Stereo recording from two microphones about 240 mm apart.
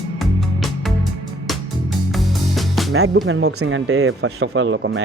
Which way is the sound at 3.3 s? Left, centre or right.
Right.